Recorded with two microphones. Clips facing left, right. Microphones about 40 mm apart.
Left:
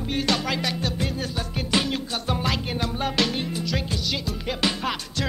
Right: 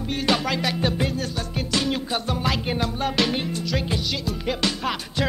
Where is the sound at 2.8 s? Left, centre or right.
Centre.